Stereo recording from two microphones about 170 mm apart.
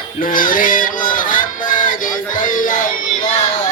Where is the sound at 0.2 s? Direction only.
55° left (ahead or behind).